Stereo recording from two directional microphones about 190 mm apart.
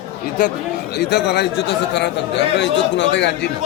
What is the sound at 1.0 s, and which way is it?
A man's voice, 60° left (ahead or behind).